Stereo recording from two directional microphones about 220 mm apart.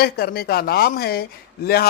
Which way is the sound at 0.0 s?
45° left (ahead or behind).